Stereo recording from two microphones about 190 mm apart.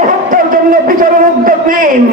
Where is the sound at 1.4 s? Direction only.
45° right (ahead or behind).